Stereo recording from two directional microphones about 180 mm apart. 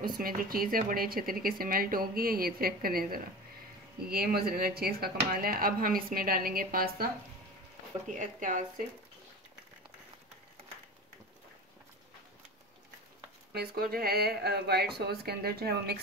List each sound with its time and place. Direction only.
0.2 s speech: 55° right (ahead or behind)
8.1 s speech: 45° right (ahead or behind)
13.5 s speech: 60° right (ahead or behind)